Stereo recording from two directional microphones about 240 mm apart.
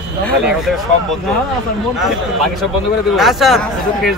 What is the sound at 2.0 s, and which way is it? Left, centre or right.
Speech, centre.